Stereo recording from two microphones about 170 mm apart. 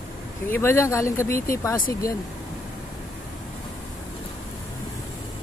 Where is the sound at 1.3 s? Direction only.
55° left (ahead or behind).